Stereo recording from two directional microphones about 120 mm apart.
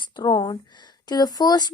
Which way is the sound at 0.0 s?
40° left (ahead or behind).